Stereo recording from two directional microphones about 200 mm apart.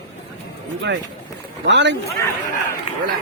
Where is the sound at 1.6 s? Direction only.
60° right (ahead or behind).